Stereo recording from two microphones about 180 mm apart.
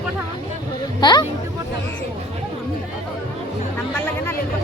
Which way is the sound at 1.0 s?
25° left (ahead or behind).